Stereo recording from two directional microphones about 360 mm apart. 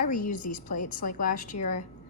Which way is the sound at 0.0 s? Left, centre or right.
Left.